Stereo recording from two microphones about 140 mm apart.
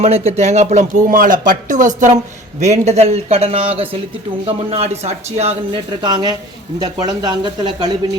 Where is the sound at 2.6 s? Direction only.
55° right (ahead or behind).